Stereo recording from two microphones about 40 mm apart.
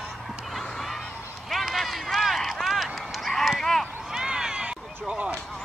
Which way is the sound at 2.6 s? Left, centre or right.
Centre.